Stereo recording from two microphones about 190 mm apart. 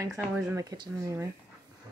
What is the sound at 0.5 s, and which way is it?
Speech, 15° right (ahead or behind).